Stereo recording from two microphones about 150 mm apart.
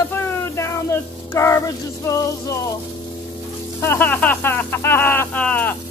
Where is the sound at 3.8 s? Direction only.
15° left (ahead or behind).